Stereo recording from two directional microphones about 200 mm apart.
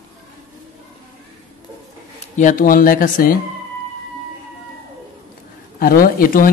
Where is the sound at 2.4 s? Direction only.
40° left (ahead or behind).